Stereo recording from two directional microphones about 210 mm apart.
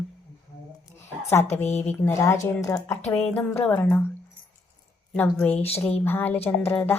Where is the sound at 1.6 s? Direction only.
30° left (ahead or behind).